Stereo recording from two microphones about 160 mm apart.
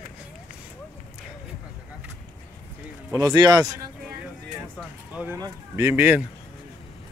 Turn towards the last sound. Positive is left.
turn(degrees=-10)  # may be behind; listen again after turning